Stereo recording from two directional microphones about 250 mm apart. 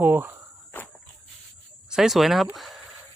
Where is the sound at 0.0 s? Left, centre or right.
Centre.